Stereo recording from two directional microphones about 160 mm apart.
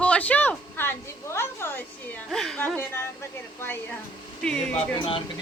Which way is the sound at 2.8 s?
15° left (ahead or behind).